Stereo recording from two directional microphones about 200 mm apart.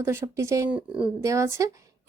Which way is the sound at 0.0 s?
10° right (ahead or behind).